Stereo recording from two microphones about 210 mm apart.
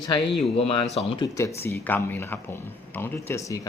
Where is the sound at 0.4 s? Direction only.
30° left (ahead or behind).